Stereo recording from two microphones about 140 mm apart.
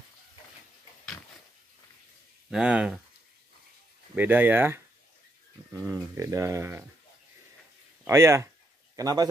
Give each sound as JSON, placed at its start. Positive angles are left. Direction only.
{"t": 2.5, "sound": "speech", "side_deg": -5}
{"t": 4.1, "sound": "speech", "side_deg": -15}
{"t": 8.1, "sound": "speech", "side_deg": -20}